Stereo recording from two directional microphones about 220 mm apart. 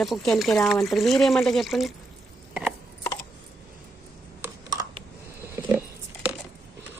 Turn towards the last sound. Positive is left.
turn(degrees=-5)  # may be behind; listen again after turning